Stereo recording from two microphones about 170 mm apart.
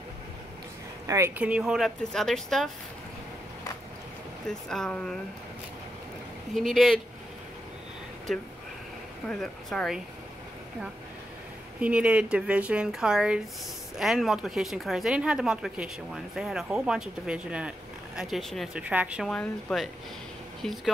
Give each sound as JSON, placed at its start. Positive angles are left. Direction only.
{"t": 1.0, "sound": "speech", "side_deg": -20}
{"t": 1.4, "sound": "speech", "side_deg": -5}
{"t": 4.5, "sound": "speech", "side_deg": 5}
{"t": 6.5, "sound": "speech", "side_deg": 0}
{"t": 8.3, "sound": "speech", "side_deg": 0}
{"t": 11.8, "sound": "speech", "side_deg": -5}
{"t": 19.2, "sound": "speech", "side_deg": 5}